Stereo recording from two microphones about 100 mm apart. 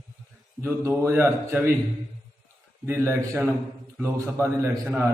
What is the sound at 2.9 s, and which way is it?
A man's voice, 25° right (ahead or behind).